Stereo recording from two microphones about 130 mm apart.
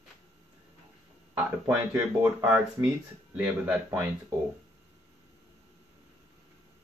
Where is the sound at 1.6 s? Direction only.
10° right (ahead or behind).